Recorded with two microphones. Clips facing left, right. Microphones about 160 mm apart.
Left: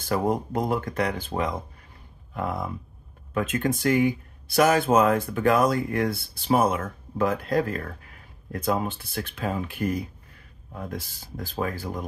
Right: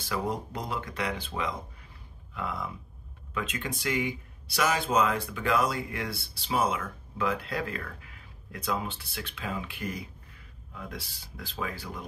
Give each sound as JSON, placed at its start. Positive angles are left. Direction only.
{"t": 0.0, "sound": "speech", "side_deg": 50}